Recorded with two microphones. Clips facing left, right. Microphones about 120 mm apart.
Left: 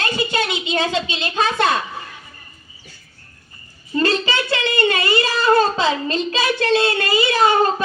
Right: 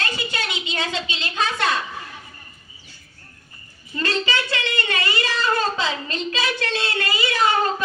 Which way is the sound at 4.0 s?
20° left (ahead or behind).